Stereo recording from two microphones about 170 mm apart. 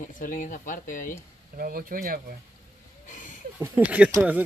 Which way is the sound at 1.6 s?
55° right (ahead or behind).